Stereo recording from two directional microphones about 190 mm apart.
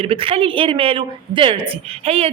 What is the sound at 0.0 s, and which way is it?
A woman's voice, 30° right (ahead or behind).